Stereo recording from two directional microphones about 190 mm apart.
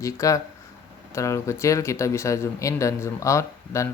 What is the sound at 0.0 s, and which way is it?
Speech, 15° left (ahead or behind).